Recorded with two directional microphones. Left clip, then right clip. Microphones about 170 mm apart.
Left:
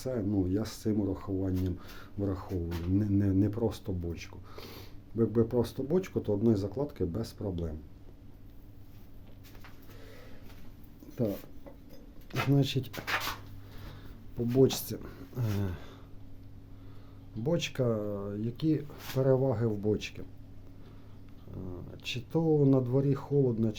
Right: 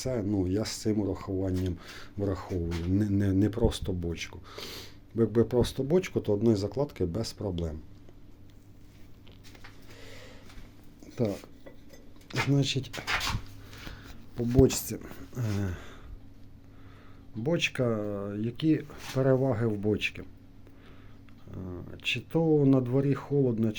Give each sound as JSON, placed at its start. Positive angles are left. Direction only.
{"t": 0.0, "sound": "speech", "side_deg": -5}
{"t": 10.0, "sound": "a sound", "side_deg": 0}
{"t": 12.5, "sound": "speech", "side_deg": 15}
{"t": 14.6, "sound": "speech", "side_deg": -5}
{"t": 17.4, "sound": "speech", "side_deg": 0}
{"t": 21.5, "sound": "speech", "side_deg": -10}